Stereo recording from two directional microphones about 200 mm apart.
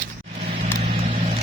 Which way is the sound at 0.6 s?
30° right (ahead or behind).